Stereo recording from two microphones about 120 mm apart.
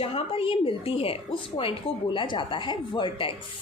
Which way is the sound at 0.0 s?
50° left (ahead or behind).